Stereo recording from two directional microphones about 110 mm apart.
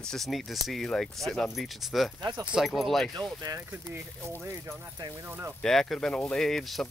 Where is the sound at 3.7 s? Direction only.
15° right (ahead or behind).